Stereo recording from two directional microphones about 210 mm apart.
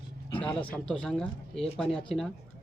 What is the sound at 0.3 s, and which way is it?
Speech, 5° left (ahead or behind).